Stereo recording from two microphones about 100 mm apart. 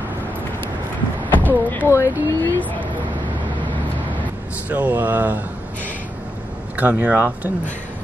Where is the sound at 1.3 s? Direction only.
20° left (ahead or behind).